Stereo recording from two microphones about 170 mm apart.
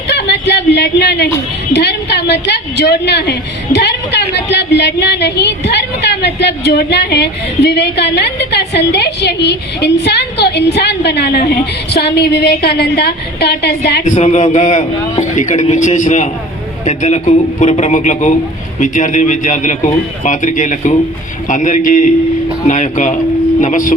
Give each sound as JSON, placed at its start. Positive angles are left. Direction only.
{"t": 0.1, "sound": "a sound", "side_deg": 80}
{"t": 1.7, "sound": "a woman's voice", "side_deg": 80}
{"t": 14.0, "sound": "a man's voice", "side_deg": 40}